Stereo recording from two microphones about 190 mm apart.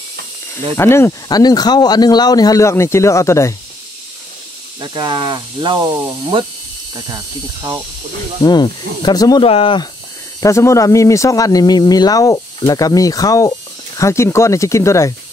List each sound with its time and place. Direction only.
0.7 s speech: 15° left (ahead or behind)
4.7 s speech: 25° right (ahead or behind)
8.4 s speech: 20° left (ahead or behind)
10.4 s speech: 15° left (ahead or behind)